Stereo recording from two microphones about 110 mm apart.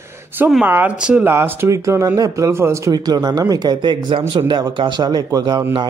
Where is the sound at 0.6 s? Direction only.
15° right (ahead or behind); by 5.6 s 40° right (ahead or behind).